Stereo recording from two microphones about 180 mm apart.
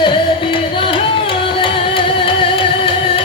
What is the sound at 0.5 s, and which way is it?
Music, 30° left (ahead or behind).